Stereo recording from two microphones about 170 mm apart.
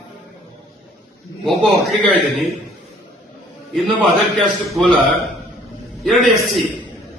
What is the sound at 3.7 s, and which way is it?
A man's voice, centre (ahead or behind).